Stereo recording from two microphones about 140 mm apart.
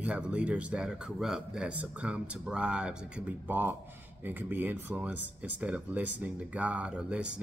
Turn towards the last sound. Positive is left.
turn(degrees=-5)  # may be behind; listen again after turning